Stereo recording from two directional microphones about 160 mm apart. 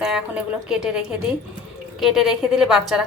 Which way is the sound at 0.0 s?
5° right (ahead or behind).